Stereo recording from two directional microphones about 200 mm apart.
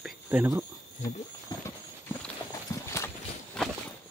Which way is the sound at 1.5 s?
20° left (ahead or behind).